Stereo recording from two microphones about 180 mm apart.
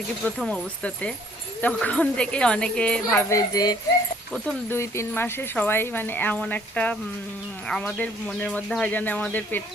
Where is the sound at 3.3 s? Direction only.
20° left (ahead or behind).